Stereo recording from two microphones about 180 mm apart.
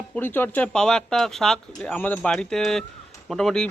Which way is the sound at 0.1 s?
10° left (ahead or behind).